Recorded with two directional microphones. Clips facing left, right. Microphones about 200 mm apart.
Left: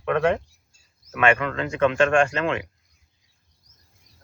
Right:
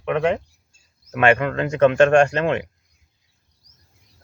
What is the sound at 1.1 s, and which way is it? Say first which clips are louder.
Speech: right 4 dB; 35° right (ahead or behind).